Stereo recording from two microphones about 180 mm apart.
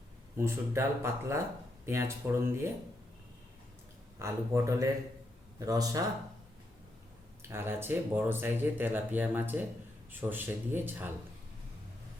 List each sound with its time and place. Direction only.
0.3 s speech: 15° right (ahead or behind)
4.2 s speech: 15° right (ahead or behind)
7.4 s speech: 15° right (ahead or behind)